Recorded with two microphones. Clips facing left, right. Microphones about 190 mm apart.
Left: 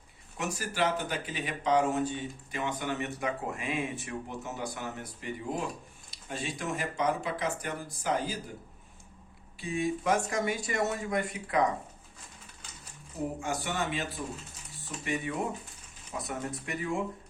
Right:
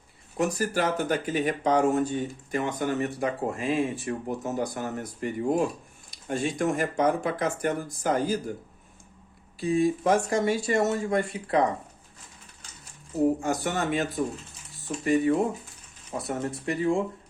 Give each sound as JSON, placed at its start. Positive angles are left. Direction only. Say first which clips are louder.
{"t": 0.3, "sound": "speech", "louder": "right 6 dB", "side_deg": -40}
{"t": 9.6, "sound": "speech", "louder": "right 8 dB", "side_deg": -35}
{"t": 13.4, "sound": "speech", "louder": "right 5 dB", "side_deg": -45}